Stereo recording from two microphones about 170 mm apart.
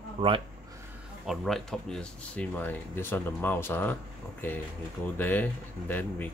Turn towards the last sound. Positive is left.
turn(degrees=10)  # may be behind; listen again after turning